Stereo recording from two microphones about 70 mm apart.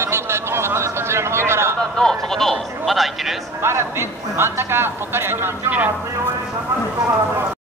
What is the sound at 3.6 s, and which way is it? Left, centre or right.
A man's voice, right.